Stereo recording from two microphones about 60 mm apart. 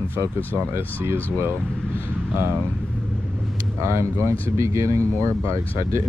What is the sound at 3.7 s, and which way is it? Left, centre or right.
Speech, right.